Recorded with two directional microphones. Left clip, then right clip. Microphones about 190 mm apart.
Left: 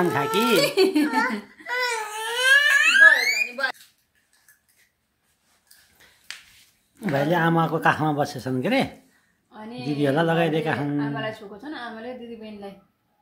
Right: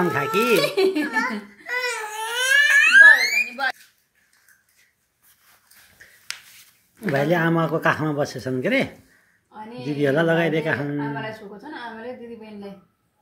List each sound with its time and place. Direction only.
0.0 s speech: centre (ahead or behind)
0.6 s a child's voice: 30° left (ahead or behind)
1.2 s crying: 10° left (ahead or behind)
6.0 s a sound: 10° left (ahead or behind)
7.0 s a woman's voice: centre (ahead or behind)